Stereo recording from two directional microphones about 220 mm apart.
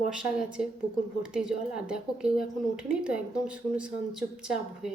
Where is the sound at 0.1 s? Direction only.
5° right (ahead or behind).